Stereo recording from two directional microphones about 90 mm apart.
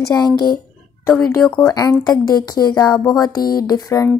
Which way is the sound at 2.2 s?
45° left (ahead or behind).